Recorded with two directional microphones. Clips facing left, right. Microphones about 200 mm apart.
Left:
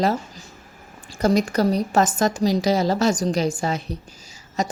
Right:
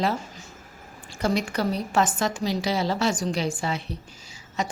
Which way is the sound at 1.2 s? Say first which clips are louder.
Left 6 dB; 40° left (ahead or behind).